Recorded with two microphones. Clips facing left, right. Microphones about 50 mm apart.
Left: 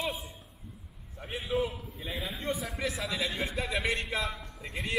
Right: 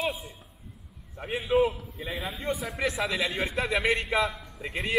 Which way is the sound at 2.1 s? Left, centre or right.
Centre.